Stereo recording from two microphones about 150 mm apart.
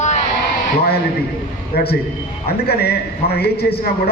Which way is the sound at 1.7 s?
90° left.